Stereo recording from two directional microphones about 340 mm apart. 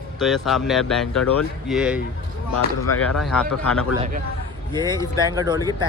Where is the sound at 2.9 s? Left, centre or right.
Left.